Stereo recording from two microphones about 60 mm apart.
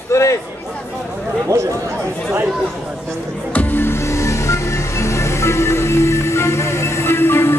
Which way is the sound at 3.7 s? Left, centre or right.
Left.